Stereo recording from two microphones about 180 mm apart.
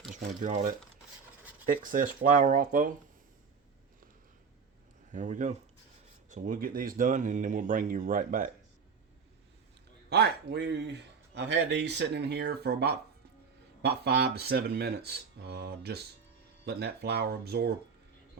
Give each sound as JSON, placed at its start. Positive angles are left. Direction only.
{"t": 0.1, "sound": "speech", "side_deg": -45}
{"t": 5.1, "sound": "speech", "side_deg": -45}
{"t": 10.1, "sound": "speech", "side_deg": -65}